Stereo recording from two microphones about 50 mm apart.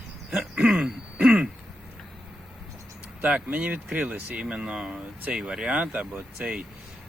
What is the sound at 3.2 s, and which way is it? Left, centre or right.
Speech, right.